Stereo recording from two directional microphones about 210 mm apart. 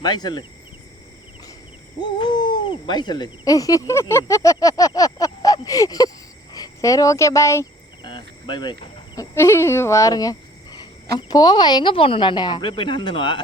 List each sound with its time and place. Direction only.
0.0 s a woman's voice: 20° left (ahead or behind)
2.0 s speech: 20° left (ahead or behind)
6.5 s cricket: 15° left (ahead or behind)
9.1 s a woman's voice: 10° left (ahead or behind)